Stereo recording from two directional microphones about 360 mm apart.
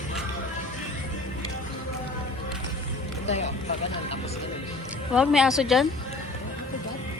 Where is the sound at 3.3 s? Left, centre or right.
Centre.